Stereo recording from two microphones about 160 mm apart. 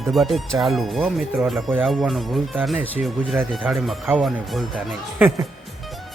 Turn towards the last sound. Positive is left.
turn(degrees=-10)  # may be behind; listen again after turning